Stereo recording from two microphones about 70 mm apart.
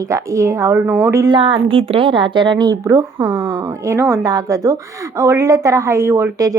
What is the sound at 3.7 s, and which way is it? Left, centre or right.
Speech, right.